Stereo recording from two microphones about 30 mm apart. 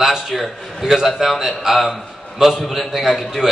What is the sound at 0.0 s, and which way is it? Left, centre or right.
A man's voice, centre.